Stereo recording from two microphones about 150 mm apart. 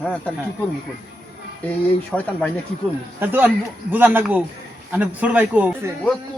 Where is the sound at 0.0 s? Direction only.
10° left (ahead or behind).